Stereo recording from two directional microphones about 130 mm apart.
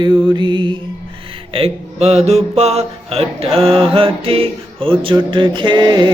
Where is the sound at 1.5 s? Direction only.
50° right (ahead or behind).